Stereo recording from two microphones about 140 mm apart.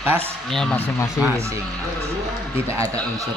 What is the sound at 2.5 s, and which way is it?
Speech, 20° right (ahead or behind).